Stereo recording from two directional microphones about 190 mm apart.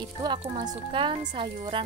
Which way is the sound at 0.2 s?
25° right (ahead or behind).